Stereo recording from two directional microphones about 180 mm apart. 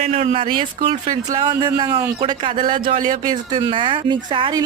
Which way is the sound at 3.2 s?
25° right (ahead or behind).